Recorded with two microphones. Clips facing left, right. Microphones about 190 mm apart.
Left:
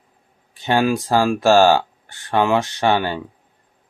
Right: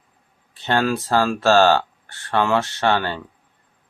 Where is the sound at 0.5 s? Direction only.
15° left (ahead or behind).